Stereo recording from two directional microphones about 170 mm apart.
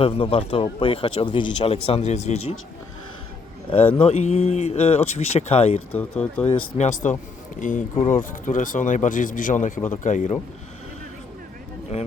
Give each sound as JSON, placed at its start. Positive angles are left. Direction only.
{"t": 0.0, "sound": "speech", "side_deg": 35}
{"t": 3.9, "sound": "speech", "side_deg": 35}
{"t": 5.9, "sound": "speech", "side_deg": 10}
{"t": 6.4, "sound": "speech", "side_deg": 40}